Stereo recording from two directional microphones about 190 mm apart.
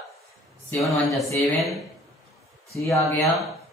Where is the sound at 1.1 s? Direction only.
Centre (ahead or behind).